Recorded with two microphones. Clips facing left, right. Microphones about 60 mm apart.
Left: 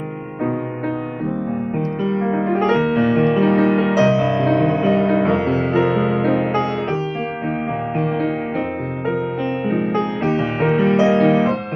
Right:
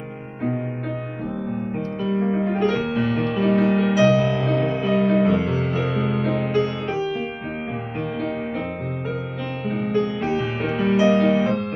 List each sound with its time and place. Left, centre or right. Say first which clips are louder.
1.8 s music: left 2 dB; left
9.9 s music: left 3 dB; left
11.0 s music: even; left